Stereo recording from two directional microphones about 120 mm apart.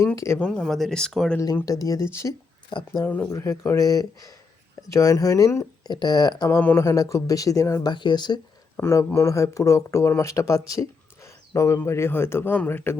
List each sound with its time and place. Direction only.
0.3 s speech: 15° left (ahead or behind)
1.6 s speech: 30° left (ahead or behind)
2.6 s speech: 40° left (ahead or behind)
3.0 s speech: 15° left (ahead or behind)
3.2 s speech: 25° left (ahead or behind)
5.9 s speech: 35° left (ahead or behind)
6.5 s speech: 15° left (ahead or behind)
7.9 s speech: 40° left (ahead or behind)
8.7 s speech: 20° left (ahead or behind)
10.7 s a sound: 25° left (ahead or behind)
11.8 s speech: 20° left (ahead or behind)